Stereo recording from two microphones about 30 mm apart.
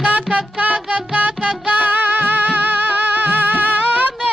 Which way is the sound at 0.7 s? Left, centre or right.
Right.